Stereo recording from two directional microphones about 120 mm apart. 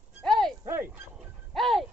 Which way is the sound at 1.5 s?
Centre (ahead or behind).